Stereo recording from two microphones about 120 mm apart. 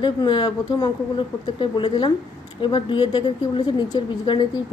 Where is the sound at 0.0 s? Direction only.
40° left (ahead or behind).